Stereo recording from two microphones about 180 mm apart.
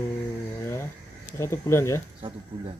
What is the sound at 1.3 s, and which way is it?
Speech, 15° left (ahead or behind).